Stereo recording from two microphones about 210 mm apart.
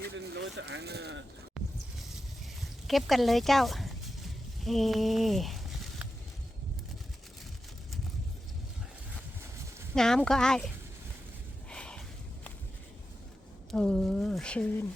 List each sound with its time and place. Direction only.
0.3 s speech: 55° right (ahead or behind)
1.6 s a sound: centre (ahead or behind)
2.6 s speech: centre (ahead or behind)
9.9 s speech: 5° left (ahead or behind)
11.7 s a sound: 5° left (ahead or behind)
13.7 s speech: 5° left (ahead or behind)